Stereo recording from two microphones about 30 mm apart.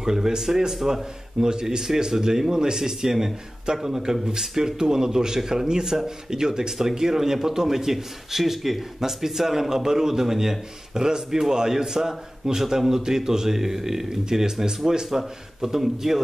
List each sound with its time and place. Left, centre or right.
0.0 s a man's voice: centre
11.0 s a man's voice: right